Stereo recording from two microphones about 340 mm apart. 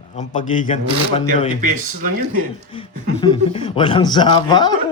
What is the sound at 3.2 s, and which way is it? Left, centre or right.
Speech, centre.